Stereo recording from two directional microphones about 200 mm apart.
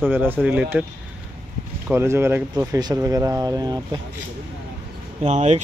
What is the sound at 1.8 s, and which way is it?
Speech, 10° right (ahead or behind).